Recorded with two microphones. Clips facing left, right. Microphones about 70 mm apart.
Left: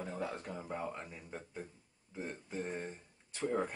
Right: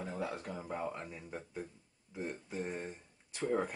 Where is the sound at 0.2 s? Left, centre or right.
Centre.